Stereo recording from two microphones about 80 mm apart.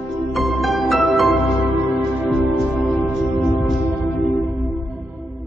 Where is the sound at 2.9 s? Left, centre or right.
Centre.